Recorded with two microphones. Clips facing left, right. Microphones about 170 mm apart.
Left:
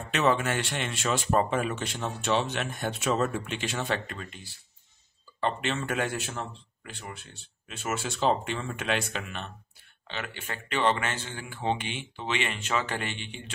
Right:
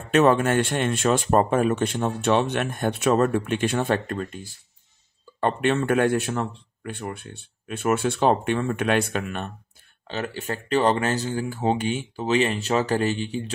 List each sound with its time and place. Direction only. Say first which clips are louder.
0.1 s a man's voice: right 8 dB; 50° right (ahead or behind)
10.0 s speech: right 8 dB; 40° right (ahead or behind)